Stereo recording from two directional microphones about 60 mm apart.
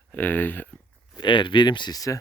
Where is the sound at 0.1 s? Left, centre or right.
Left.